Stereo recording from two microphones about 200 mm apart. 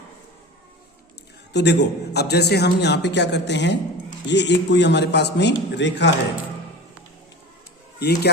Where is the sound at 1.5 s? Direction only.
60° left (ahead or behind).